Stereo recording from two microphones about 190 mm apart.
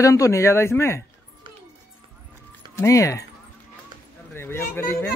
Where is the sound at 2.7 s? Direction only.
15° left (ahead or behind).